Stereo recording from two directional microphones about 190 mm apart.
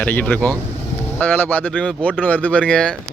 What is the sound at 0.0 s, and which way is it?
Speech, 10° left (ahead or behind).